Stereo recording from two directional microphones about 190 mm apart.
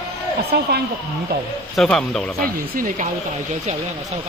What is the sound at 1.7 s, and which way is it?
Speech, 5° left (ahead or behind).